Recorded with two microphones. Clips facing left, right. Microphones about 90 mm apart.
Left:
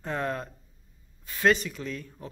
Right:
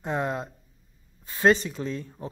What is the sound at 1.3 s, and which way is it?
Speech, 30° right (ahead or behind).